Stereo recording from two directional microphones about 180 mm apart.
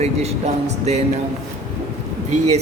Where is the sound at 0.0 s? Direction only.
35° right (ahead or behind).